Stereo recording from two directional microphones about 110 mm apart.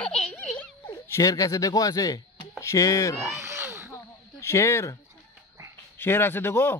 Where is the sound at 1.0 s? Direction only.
30° left (ahead or behind).